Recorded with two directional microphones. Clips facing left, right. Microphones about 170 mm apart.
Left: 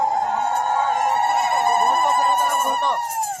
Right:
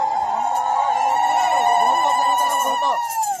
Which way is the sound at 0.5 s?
25° right (ahead or behind).